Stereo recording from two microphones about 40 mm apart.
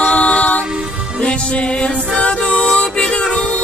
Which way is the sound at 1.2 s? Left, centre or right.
Left.